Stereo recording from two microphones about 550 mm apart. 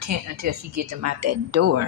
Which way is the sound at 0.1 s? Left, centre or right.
Right.